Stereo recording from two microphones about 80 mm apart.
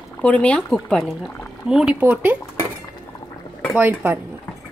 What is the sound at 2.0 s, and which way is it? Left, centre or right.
Speech, right.